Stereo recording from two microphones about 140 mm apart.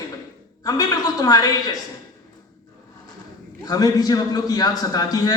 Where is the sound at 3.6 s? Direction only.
25° left (ahead or behind).